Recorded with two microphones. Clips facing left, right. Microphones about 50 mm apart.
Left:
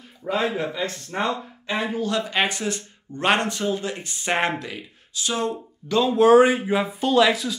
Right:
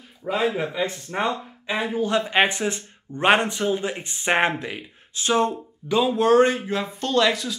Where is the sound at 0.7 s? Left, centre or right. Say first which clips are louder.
Right 1 dB; centre.